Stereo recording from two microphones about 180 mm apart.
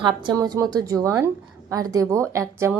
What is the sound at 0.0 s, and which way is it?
A woman's voice, 25° right (ahead or behind).